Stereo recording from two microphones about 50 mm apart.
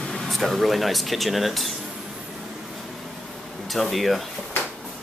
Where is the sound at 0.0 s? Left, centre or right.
Centre.